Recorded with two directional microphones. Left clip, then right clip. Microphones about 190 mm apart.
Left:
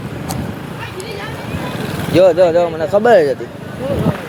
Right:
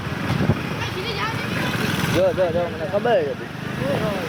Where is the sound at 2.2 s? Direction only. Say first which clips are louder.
Left 11 dB; 40° left (ahead or behind).